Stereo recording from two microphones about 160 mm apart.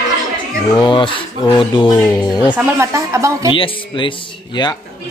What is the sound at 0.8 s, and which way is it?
Speech, 30° left (ahead or behind).